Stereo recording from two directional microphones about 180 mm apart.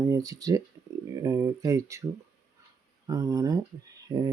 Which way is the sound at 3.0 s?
20° right (ahead or behind).